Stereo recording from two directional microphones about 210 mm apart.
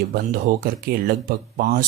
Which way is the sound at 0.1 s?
45° right (ahead or behind).